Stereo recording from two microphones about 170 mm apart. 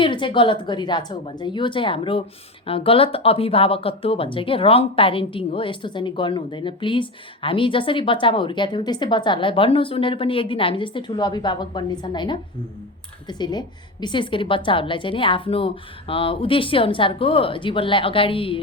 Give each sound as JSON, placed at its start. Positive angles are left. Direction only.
{"t": 0.0, "sound": "a woman's voice", "side_deg": 30}